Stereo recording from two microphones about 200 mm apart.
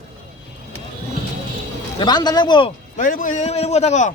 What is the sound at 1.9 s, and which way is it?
Speech, 20° left (ahead or behind).